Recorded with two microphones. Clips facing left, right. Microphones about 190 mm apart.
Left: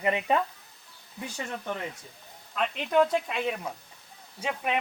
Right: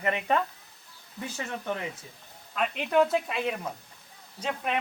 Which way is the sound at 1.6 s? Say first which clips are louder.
Right 1 dB; 5° right (ahead or behind).